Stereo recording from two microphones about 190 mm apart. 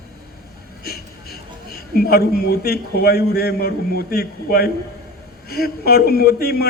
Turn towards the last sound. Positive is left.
turn(degrees=55)  # may be behind; listen again after turning